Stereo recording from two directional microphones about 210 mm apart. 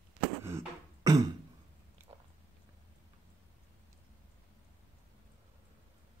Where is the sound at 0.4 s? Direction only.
15° right (ahead or behind).